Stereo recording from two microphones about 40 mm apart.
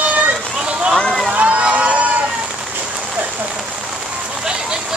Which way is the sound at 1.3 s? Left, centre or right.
Right.